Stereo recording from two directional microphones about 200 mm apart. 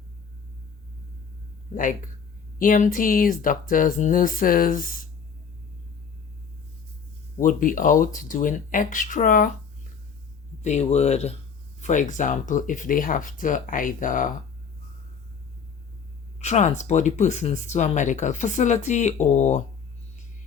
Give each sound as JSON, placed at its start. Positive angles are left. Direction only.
{"t": 2.6, "sound": "speech", "side_deg": 40}
{"t": 7.4, "sound": "speech", "side_deg": 40}
{"t": 10.6, "sound": "speech", "side_deg": 35}
{"t": 16.4, "sound": "speech", "side_deg": 35}